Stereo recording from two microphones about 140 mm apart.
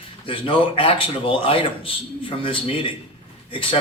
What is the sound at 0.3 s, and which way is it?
A man's voice, 40° left (ahead or behind).